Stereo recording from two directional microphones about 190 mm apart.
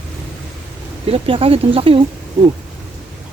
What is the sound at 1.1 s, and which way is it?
Speech, 30° right (ahead or behind).